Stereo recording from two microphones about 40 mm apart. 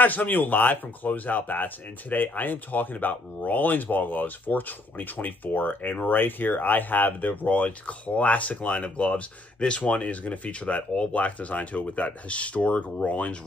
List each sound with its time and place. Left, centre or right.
0.0 s speech: left